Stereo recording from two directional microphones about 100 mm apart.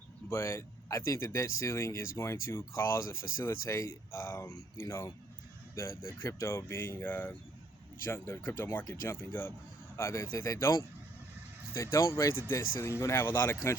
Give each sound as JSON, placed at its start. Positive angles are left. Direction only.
{"t": 0.3, "sound": "speech", "side_deg": 30}
{"t": 8.8, "sound": "speech", "side_deg": 35}
{"t": 9.3, "sound": "speech", "side_deg": 20}